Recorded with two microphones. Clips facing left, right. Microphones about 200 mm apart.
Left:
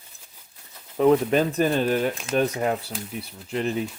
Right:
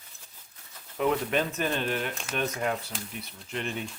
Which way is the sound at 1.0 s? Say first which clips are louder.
Left 8 dB; 35° left (ahead or behind).